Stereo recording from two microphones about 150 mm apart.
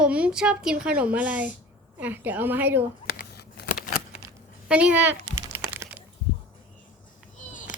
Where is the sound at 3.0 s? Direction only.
90° left.